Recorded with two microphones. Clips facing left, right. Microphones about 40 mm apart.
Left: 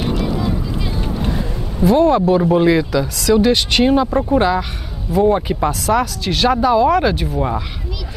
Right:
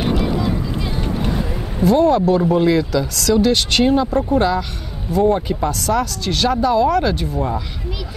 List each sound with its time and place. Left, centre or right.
0.0 s vehicle: centre
1.2 s a sound: centre
1.8 s speech: centre